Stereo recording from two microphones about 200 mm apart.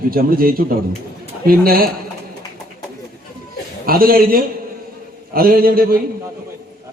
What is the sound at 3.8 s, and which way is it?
A man's voice, 45° right (ahead or behind).